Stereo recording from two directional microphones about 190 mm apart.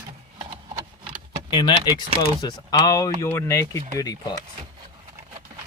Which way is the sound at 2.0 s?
20° left (ahead or behind).